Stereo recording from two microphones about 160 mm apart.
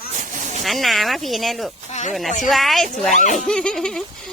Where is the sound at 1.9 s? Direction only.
45° left (ahead or behind).